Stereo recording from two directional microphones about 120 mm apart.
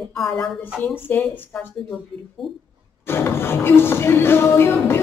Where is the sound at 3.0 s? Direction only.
20° left (ahead or behind).